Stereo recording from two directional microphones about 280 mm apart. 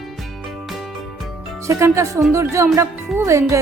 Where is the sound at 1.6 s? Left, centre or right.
Centre.